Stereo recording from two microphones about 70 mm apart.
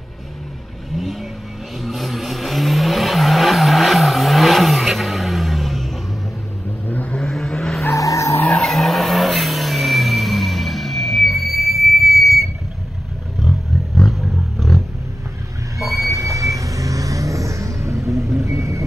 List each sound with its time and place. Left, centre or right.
0.9 s vehicle: centre
6.9 s vehicle: centre
7.2 s vehicle: centre
7.8 s vehicle: left
8.5 s vehicle: centre
13.4 s roaring cats: centre
15.8 s vehicle: right